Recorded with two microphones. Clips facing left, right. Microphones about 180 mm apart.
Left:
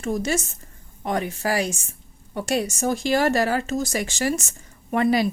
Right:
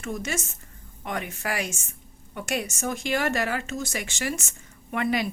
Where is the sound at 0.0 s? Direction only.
35° left (ahead or behind).